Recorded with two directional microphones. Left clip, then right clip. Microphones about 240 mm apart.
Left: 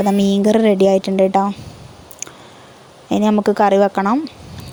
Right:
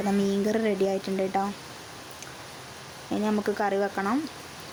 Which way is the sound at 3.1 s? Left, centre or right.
Left.